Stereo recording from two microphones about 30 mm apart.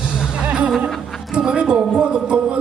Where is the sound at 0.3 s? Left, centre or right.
Right.